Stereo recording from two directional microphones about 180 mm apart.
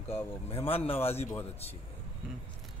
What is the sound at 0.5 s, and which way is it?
Speech, 35° left (ahead or behind).